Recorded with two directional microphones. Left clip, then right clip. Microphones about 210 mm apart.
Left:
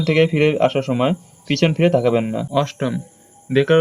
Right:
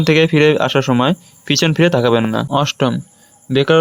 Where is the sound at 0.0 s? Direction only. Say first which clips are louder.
Right 4 dB; 40° right (ahead or behind).